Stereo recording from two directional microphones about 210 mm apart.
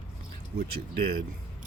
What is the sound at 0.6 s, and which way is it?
Speech, 45° right (ahead or behind).